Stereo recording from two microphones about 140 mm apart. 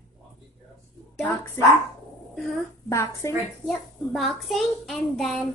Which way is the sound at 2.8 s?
20° left (ahead or behind).